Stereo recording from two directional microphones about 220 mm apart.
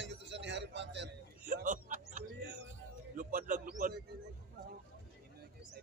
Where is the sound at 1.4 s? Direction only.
40° right (ahead or behind).